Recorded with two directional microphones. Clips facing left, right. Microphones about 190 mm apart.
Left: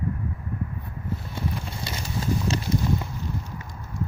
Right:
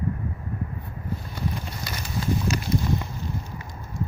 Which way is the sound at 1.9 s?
30° left (ahead or behind).